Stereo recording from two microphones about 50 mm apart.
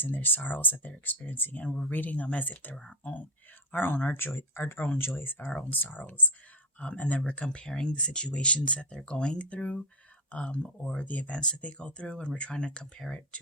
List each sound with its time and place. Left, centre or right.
0.0 s speech: left
1.6 s speech: centre
1.9 s speech: left
3.7 s speech: left
11.3 s speech: centre